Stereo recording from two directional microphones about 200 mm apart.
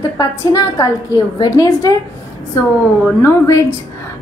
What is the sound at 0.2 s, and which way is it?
A woman's voice, 20° left (ahead or behind).